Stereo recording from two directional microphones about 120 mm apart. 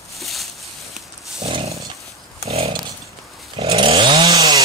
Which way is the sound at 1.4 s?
50° right (ahead or behind).